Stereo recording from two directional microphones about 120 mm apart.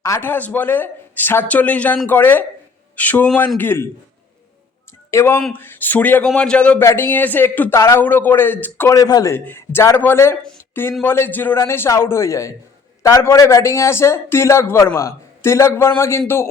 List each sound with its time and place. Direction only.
0.0 s a man's voice: 20° left (ahead or behind)
5.1 s a man's voice: 20° left (ahead or behind)
9.0 s speech: 30° left (ahead or behind)
9.3 s a man's voice: 20° left (ahead or behind)